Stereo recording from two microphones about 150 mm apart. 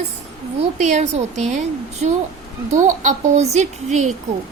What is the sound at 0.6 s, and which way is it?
A woman's voice, 50° right (ahead or behind).